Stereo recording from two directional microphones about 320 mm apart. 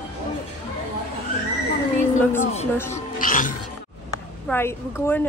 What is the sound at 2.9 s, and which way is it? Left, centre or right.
Music, left.